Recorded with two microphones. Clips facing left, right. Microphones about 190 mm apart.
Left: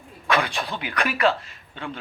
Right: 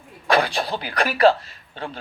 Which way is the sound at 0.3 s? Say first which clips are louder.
Right 4 dB; 35° right (ahead or behind).